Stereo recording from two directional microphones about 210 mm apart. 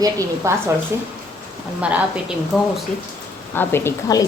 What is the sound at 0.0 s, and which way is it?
Speech, 15° right (ahead or behind).